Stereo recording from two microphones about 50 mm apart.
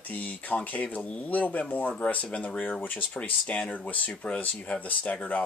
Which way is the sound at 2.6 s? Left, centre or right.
Left.